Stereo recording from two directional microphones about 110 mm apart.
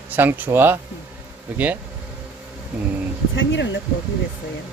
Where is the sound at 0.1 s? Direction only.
15° right (ahead or behind).